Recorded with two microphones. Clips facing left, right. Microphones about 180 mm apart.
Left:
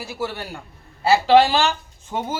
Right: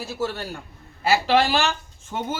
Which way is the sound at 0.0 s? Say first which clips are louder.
Right 1 dB; 15° left (ahead or behind).